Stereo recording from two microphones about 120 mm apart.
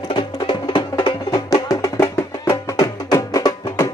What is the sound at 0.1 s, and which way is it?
Music, 40° left (ahead or behind).